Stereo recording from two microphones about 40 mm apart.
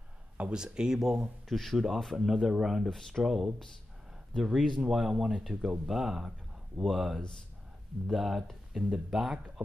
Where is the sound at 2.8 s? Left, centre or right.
Centre.